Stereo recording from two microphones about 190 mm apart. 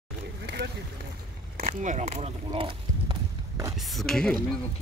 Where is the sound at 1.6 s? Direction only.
40° right (ahead or behind).